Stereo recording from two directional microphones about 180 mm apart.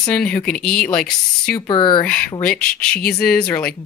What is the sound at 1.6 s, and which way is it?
Speech, 25° left (ahead or behind).